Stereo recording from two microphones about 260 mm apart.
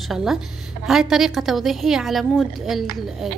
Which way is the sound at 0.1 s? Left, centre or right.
Centre.